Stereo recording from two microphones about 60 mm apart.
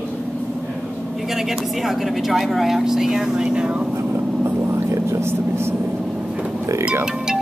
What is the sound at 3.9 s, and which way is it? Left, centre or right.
Vehicle, right.